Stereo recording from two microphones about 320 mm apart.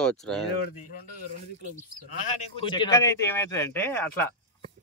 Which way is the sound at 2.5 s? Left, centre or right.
Centre.